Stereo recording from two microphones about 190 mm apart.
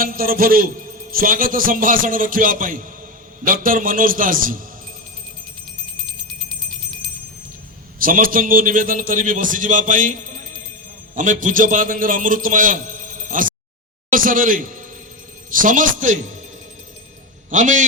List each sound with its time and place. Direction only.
0.0 s a man's voice: 50° right (ahead or behind)
7.9 s a man's voice: 50° right (ahead or behind)
17.5 s a man's voice: 40° right (ahead or behind)